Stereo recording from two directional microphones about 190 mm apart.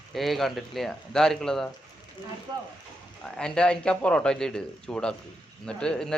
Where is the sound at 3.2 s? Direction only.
5° left (ahead or behind).